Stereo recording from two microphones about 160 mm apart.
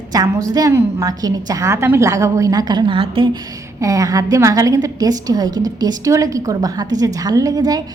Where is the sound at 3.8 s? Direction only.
20° right (ahead or behind).